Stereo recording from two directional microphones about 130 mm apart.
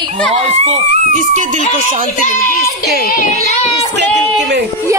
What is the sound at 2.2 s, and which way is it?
Speech, 80° left.